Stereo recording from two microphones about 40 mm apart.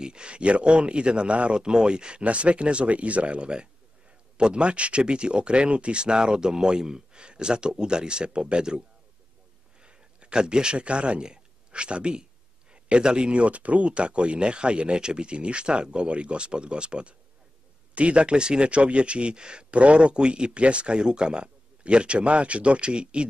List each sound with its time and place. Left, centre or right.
0.0 s speech: right
9.8 s speech: right